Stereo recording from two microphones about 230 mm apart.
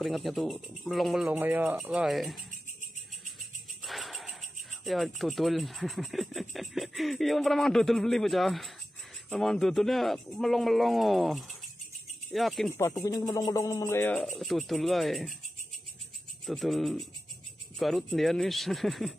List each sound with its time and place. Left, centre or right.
0.0 s speech: centre
3.8 s speech: centre
12.7 s speech: centre
16.4 s speech: centre